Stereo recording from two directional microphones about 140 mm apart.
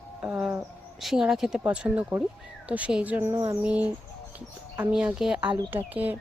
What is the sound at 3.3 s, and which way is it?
Speech, 30° right (ahead or behind).